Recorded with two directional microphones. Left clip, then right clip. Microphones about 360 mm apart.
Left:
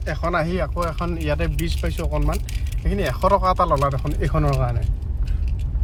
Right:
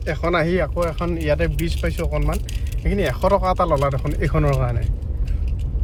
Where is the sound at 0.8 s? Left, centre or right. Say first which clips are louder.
Right 3 dB; left.